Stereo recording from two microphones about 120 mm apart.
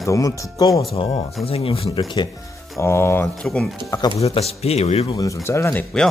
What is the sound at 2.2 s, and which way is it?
Speech, 40° left (ahead or behind).